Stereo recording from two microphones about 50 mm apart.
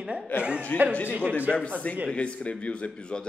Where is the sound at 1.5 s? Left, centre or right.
Right.